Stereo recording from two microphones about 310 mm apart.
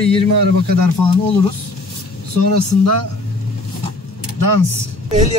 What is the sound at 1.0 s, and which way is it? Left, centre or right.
Speech, left.